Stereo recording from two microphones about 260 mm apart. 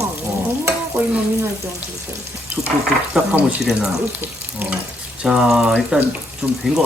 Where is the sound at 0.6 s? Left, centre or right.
Centre.